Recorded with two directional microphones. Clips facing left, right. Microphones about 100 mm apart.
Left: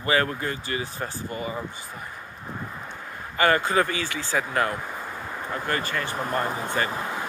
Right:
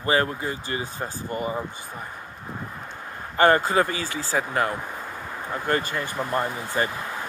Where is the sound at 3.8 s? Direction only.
20° right (ahead or behind).